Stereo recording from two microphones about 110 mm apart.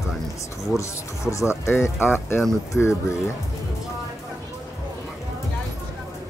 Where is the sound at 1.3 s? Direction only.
25° left (ahead or behind).